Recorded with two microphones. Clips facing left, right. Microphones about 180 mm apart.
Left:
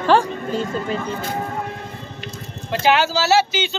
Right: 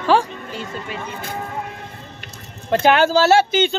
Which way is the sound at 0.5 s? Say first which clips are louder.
Left 7 dB; 35° left (ahead or behind).